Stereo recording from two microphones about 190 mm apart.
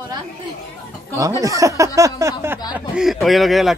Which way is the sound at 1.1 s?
15° right (ahead or behind).